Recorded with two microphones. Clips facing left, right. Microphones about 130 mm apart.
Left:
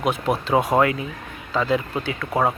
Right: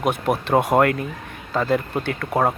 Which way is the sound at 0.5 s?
Centre (ahead or behind).